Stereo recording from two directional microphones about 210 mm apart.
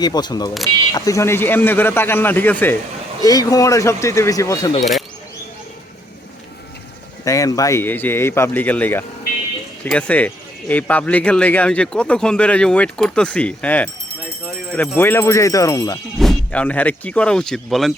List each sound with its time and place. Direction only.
0.0 s speech: 20° left (ahead or behind)
7.3 s speech: 15° left (ahead or behind)
16.1 s speech: centre (ahead or behind)